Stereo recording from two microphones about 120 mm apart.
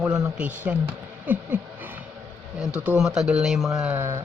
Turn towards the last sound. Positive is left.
turn(degrees=-20)  # may be behind; listen again after turning